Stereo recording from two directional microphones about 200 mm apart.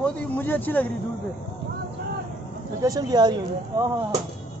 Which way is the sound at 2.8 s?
20° right (ahead or behind).